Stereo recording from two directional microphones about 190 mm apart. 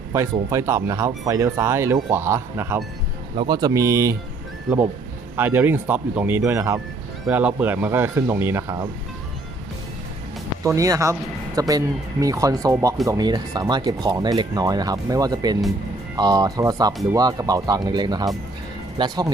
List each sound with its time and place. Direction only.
0.5 s speech: 15° right (ahead or behind)
5.4 s speech: 10° right (ahead or behind)
10.8 s speech: 15° right (ahead or behind)